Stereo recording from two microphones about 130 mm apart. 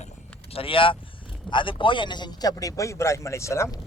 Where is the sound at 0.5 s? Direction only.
45° left (ahead or behind).